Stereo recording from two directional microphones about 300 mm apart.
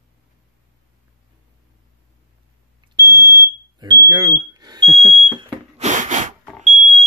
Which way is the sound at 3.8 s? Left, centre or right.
Centre.